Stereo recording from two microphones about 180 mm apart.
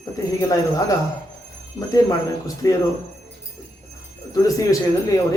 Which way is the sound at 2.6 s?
15° left (ahead or behind).